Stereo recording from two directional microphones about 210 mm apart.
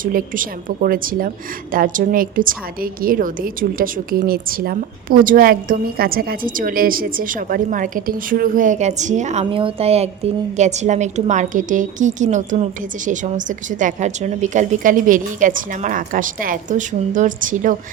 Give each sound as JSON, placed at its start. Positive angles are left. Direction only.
{"t": 0.0, "sound": "a woman's voice", "side_deg": -40}